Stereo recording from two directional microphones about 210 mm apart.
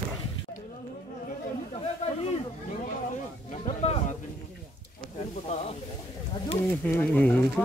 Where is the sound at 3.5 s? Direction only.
30° left (ahead or behind).